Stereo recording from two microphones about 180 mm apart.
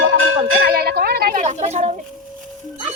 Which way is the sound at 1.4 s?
40° right (ahead or behind).